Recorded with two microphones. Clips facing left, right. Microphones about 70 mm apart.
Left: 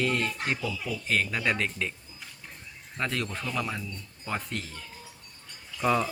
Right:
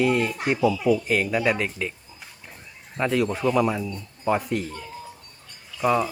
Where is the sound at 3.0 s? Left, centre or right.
Centre.